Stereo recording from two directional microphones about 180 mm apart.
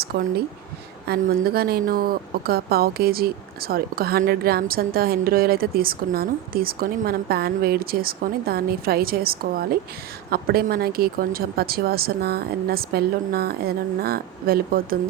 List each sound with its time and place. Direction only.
0.0 s a woman's voice: 60° right (ahead or behind)